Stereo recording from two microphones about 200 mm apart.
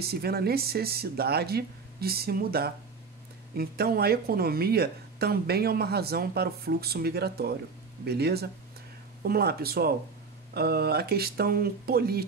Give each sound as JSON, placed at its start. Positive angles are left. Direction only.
{"t": 0.0, "sound": "speech", "side_deg": -50}